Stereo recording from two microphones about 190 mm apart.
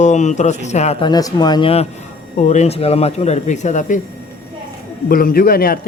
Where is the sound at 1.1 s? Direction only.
20° left (ahead or behind); by 4.0 s 40° left (ahead or behind).